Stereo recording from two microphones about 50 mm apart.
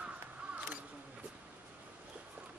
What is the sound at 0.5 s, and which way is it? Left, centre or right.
Single-lens reflex camera, right.